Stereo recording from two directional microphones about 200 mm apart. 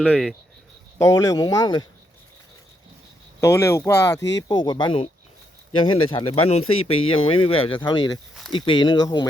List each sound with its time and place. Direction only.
0.0 s speech: 5° left (ahead or behind)
0.9 s speech: 15° left (ahead or behind)
3.4 s speech: 15° left (ahead or behind)